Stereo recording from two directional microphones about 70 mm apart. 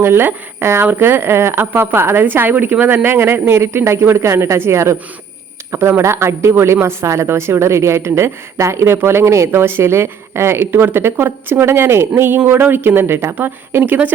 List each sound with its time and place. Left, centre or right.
0.0 s speech: right